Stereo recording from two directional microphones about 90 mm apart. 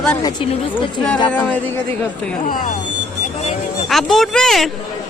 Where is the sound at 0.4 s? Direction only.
70° left (ahead or behind).